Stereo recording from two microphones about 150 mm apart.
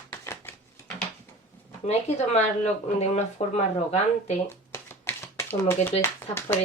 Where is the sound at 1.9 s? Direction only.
45° left (ahead or behind).